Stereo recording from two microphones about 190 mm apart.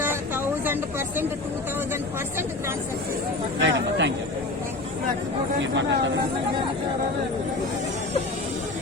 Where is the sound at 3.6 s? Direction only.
75° right (ahead or behind).